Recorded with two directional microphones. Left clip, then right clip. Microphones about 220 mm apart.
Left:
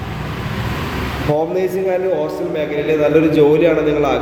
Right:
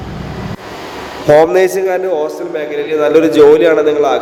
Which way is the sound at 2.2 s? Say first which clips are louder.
Right 2 dB; 15° right (ahead or behind).